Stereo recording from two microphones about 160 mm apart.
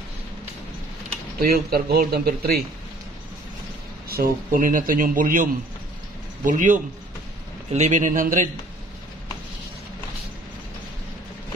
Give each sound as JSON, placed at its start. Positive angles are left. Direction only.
{"t": 1.4, "sound": "speech", "side_deg": -70}
{"t": 4.1, "sound": "a man's voice", "side_deg": -65}